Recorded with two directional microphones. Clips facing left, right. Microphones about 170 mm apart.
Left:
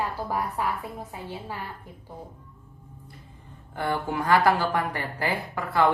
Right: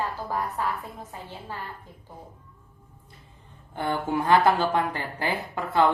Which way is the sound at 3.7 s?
25° right (ahead or behind).